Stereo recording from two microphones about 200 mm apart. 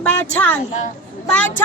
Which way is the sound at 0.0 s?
10° left (ahead or behind).